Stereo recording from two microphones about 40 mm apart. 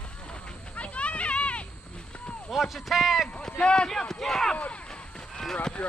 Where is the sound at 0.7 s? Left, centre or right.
Left.